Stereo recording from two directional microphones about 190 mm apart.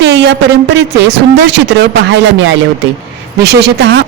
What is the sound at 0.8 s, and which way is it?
A woman's voice, 65° right (ahead or behind).